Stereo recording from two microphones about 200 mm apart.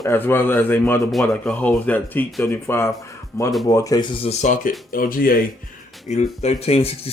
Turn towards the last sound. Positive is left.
turn(degrees=30)  # may be behind; listen again after turning